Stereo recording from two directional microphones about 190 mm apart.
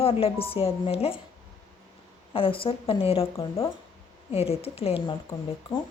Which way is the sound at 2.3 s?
30° left (ahead or behind).